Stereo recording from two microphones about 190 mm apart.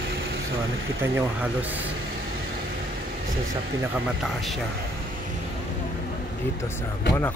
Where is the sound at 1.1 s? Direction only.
10° right (ahead or behind).